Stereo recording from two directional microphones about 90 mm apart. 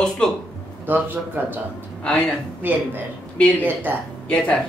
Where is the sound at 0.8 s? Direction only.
20° right (ahead or behind).